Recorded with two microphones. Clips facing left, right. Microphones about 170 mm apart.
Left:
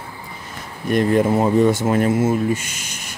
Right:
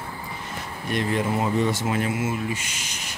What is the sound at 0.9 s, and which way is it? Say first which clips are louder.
Speech: left 8 dB; 45° left (ahead or behind).